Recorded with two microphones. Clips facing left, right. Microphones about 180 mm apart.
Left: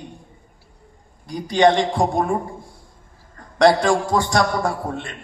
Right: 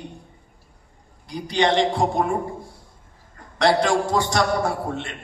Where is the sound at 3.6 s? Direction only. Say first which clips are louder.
Left 3 dB; 50° left (ahead or behind).